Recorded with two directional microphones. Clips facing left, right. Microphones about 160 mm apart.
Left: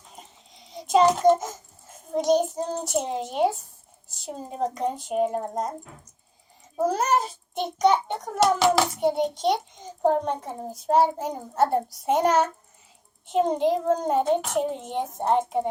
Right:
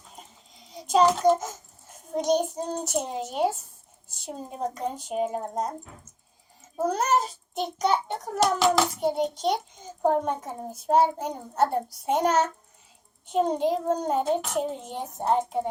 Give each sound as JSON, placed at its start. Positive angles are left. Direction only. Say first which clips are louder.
{"t": 0.2, "sound": "child singing", "louder": "left 1 dB", "side_deg": 0}
{"t": 1.9, "sound": "a child's voice", "louder": "left 3 dB", "side_deg": 0}
{"t": 6.8, "sound": "a child's voice", "louder": "left 1 dB", "side_deg": 5}
{"t": 13.3, "sound": "a child's voice", "louder": "left 2 dB", "side_deg": 5}